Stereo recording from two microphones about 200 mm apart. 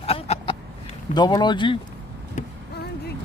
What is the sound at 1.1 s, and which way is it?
Speech, 20° left (ahead or behind).